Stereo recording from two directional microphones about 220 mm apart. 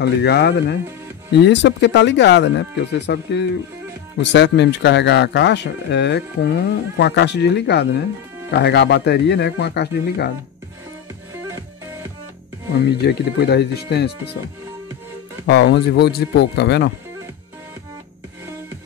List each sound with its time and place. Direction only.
0.0 s speech: 50° left (ahead or behind)
12.8 s speech: 45° left (ahead or behind)
15.4 s speech: 50° left (ahead or behind)